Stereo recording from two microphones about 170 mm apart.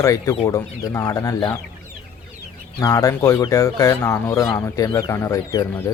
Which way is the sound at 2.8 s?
20° left (ahead or behind).